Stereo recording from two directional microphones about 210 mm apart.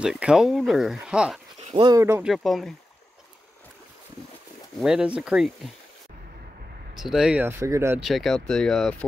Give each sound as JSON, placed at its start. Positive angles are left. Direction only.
{"t": 0.0, "sound": "speech", "side_deg": -5}
{"t": 1.8, "sound": "speech", "side_deg": -15}
{"t": 2.3, "sound": "speech", "side_deg": 0}
{"t": 4.7, "sound": "speech", "side_deg": -5}
{"t": 7.0, "sound": "speech", "side_deg": 0}
{"t": 8.0, "sound": "speech", "side_deg": 0}